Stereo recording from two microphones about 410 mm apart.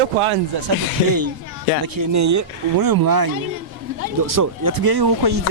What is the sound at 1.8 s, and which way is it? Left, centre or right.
Speech, right.